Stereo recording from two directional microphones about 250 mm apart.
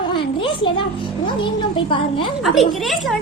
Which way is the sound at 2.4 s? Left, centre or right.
Centre.